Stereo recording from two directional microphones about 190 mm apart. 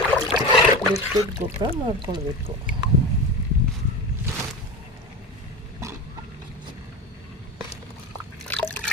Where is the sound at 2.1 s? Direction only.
35° right (ahead or behind).